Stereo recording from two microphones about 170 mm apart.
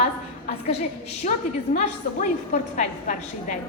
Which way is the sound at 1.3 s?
45° left (ahead or behind).